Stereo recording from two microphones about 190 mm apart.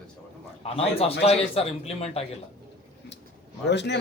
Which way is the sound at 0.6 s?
30° left (ahead or behind).